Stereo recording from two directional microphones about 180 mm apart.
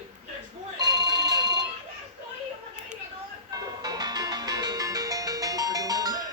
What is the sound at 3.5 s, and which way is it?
Music, 20° right (ahead or behind).